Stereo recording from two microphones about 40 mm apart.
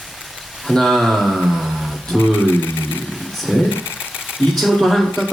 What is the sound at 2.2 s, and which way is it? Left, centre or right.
Speech, left.